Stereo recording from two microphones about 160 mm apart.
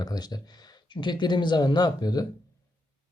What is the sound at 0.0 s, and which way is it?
Speech, 25° left (ahead or behind).